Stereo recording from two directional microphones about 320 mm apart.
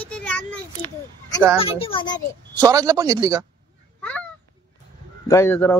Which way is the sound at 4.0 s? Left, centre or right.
Centre.